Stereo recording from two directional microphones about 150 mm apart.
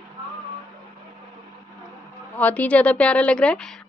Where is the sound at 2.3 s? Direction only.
10° left (ahead or behind).